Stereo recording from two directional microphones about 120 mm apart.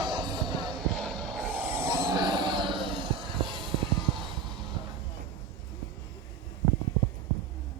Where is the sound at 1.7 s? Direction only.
25° right (ahead or behind); by 3.7 s 45° right (ahead or behind).